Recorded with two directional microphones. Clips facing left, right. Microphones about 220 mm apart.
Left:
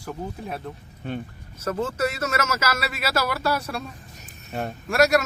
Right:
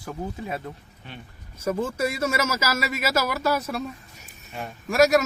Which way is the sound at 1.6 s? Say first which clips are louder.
Even; 10° right (ahead or behind).